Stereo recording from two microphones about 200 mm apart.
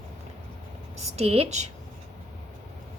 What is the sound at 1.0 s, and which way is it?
Speech, 30° right (ahead or behind).